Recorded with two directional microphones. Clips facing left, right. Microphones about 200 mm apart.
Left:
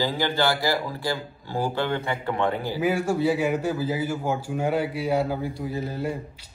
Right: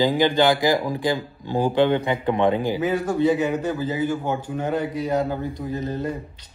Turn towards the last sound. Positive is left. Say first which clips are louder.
# right 2 dB
turn(degrees=10)  # may be behind; listen again after turning